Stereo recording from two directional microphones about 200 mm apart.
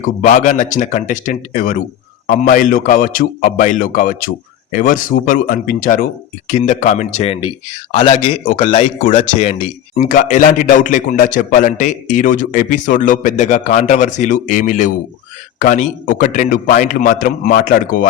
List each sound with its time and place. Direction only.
0.0 s speech: 40° left (ahead or behind)
8.4 s speech: 40° left (ahead or behind)